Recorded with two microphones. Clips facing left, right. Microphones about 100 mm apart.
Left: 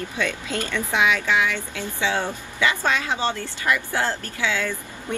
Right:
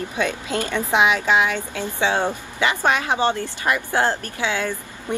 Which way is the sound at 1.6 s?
50° right (ahead or behind).